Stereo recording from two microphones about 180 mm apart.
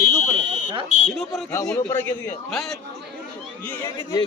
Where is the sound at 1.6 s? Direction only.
10° left (ahead or behind).